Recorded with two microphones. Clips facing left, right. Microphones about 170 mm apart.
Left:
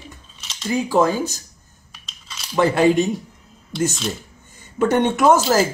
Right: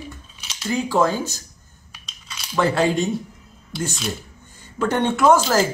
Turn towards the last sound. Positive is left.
turn(degrees=10)  # may be behind; listen again after turning